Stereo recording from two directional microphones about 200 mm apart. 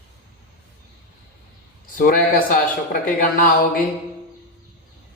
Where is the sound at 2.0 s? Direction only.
45° left (ahead or behind).